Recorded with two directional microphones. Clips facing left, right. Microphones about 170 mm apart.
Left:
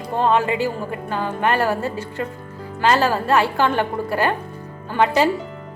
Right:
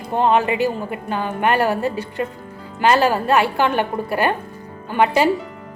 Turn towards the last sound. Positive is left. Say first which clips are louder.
# right 1 dB
turn(degrees=-15)  # may be behind; listen again after turning